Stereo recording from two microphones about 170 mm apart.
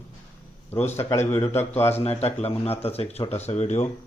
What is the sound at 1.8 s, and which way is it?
Speech, 35° left (ahead or behind).